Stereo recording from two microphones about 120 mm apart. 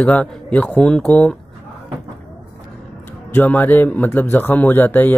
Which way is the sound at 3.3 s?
15° left (ahead or behind).